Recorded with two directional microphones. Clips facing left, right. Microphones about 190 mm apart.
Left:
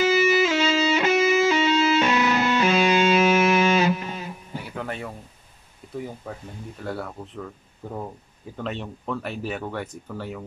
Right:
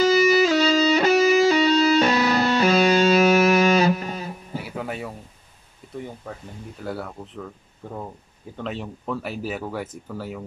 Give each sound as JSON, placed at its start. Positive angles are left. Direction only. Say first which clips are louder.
{"t": 0.0, "sound": "music", "louder": "right 3 dB", "side_deg": -35}
{"t": 4.6, "sound": "music", "louder": "even", "side_deg": -5}
{"t": 5.9, "sound": "speech", "louder": "left 1 dB", "side_deg": 5}
{"t": 8.5, "sound": "speech", "louder": "even", "side_deg": 0}